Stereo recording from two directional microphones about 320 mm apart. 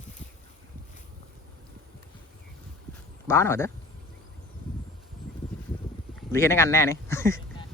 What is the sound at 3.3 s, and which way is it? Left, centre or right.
Speech, centre.